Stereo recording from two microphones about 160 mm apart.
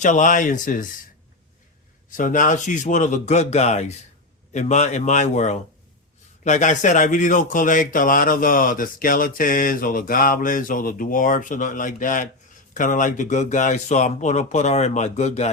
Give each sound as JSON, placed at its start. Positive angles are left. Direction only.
{"t": 0.0, "sound": "speech", "side_deg": 50}
{"t": 2.0, "sound": "speech", "side_deg": 55}